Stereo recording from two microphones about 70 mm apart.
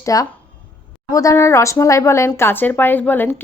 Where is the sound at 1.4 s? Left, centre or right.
Left.